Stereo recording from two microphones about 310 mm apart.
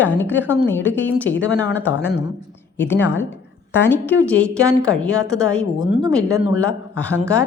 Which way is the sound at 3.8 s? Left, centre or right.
Centre.